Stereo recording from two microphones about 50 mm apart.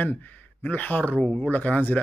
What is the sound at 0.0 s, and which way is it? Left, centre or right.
A man's voice, left.